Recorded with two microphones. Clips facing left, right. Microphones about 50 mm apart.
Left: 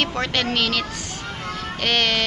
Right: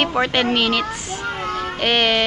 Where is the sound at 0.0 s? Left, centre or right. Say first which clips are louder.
Right 5 dB; centre.